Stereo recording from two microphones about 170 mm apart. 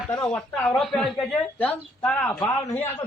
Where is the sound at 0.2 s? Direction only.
5° left (ahead or behind).